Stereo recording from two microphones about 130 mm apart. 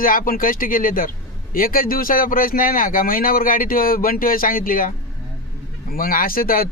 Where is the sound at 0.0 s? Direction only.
90° left.